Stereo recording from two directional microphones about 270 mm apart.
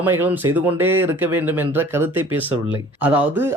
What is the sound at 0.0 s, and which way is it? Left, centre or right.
Speech, centre.